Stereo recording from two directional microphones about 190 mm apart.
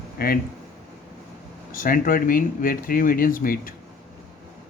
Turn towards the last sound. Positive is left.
turn(degrees=50)  # may be behind; listen again after turning